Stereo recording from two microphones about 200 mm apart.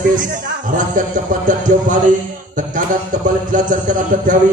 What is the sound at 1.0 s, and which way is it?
Music, 40° right (ahead or behind).